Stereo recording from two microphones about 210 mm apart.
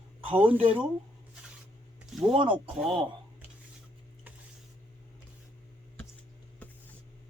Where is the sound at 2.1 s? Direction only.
Centre (ahead or behind).